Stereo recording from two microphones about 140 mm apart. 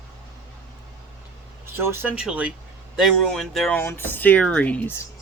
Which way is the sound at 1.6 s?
20° right (ahead or behind).